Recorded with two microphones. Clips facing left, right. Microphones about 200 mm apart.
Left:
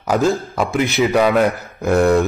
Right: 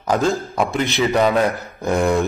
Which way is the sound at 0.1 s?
5° left (ahead or behind).